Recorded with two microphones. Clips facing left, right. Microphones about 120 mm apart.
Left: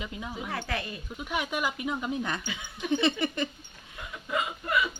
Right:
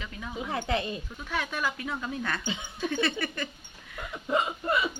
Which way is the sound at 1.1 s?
15° left (ahead or behind).